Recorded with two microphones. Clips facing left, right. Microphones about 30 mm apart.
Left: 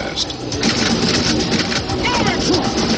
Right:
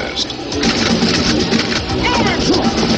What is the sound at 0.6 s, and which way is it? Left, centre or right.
Speech, centre.